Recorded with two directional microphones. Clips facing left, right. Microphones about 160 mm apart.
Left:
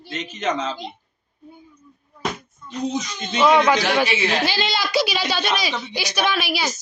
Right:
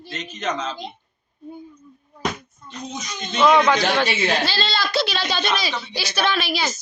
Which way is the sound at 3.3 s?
10° left (ahead or behind).